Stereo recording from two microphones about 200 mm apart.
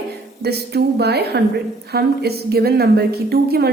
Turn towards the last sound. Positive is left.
turn(degrees=-50)  # may be behind; listen again after turning